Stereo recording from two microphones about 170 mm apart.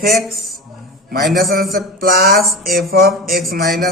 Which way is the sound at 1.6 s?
60° right (ahead or behind).